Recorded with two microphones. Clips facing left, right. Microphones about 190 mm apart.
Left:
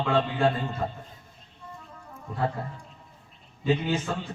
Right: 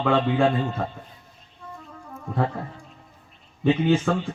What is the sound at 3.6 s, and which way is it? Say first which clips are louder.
Speech: right 6 dB; 55° right (ahead or behind).